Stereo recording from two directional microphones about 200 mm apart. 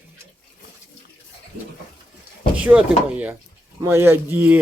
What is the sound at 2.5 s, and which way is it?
Speech, 5° right (ahead or behind).